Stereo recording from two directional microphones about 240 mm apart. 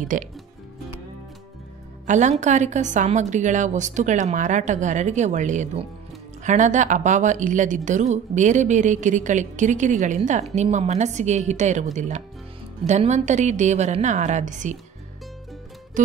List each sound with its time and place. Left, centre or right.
0.1 s a woman's voice: right
2.0 s a woman's voice: right